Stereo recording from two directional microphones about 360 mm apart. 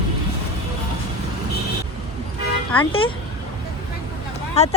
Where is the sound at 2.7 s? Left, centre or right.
Centre.